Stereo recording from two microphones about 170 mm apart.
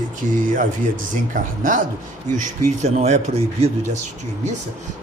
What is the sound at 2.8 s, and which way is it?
Speech, 40° right (ahead or behind).